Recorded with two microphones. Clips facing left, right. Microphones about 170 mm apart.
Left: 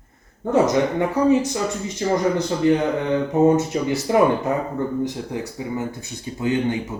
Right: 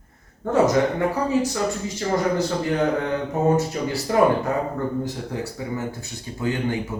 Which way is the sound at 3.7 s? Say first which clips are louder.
Left 4 dB; 20° left (ahead or behind).